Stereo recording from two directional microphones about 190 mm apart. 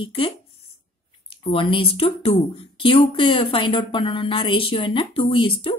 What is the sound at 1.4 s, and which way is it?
A woman's voice, 25° left (ahead or behind).